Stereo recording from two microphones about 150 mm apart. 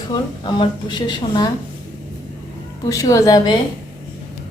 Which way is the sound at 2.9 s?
20° left (ahead or behind).